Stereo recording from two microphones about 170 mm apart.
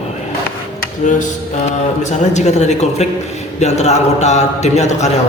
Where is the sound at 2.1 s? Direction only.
45° left (ahead or behind).